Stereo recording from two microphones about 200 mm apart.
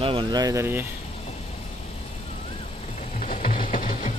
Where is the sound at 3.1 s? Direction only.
40° left (ahead or behind).